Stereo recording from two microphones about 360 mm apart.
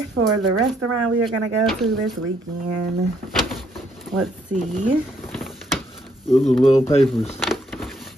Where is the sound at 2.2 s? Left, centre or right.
Right.